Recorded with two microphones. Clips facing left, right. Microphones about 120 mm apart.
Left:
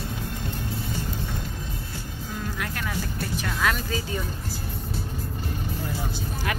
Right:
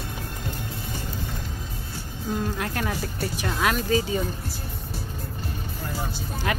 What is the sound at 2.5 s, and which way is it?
Music, 30° right (ahead or behind).